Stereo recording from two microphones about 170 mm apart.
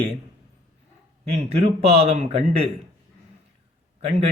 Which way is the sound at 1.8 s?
40° right (ahead or behind).